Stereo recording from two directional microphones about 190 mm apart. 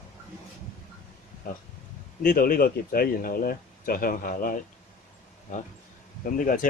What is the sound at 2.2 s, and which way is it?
Speech, 50° left (ahead or behind).